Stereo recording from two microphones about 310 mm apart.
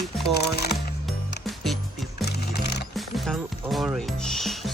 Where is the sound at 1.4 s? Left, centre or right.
Centre.